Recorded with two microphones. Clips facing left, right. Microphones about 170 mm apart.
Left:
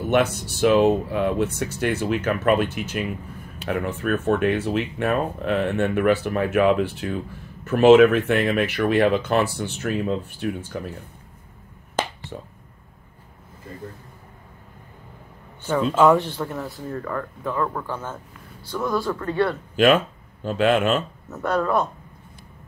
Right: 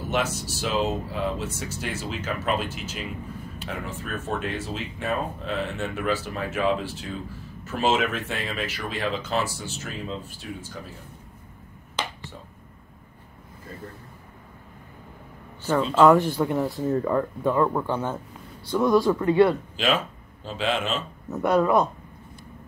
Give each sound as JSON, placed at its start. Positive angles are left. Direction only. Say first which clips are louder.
{"t": 0.0, "sound": "speech", "louder": "left 6 dB", "side_deg": 60}
{"t": 11.9, "sound": "finger snapping", "louder": "left 6 dB", "side_deg": 50}
{"t": 15.8, "sound": "speech", "louder": "even", "side_deg": 5}
{"t": 16.2, "sound": "speech", "louder": "right 4 dB", "side_deg": -10}
{"t": 19.8, "sound": "speech", "louder": "left 13 dB", "side_deg": 55}
{"t": 21.3, "sound": "speech", "louder": "right 2 dB", "side_deg": -15}